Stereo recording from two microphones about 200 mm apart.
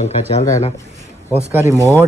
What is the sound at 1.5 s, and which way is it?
Speech, 15° right (ahead or behind).